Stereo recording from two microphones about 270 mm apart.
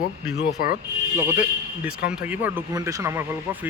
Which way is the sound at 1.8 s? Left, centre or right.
Centre.